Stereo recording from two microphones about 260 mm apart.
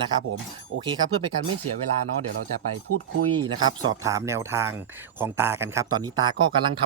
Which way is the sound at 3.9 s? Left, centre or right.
Centre.